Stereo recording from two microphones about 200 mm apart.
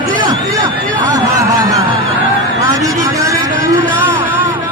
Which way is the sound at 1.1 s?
15° right (ahead or behind).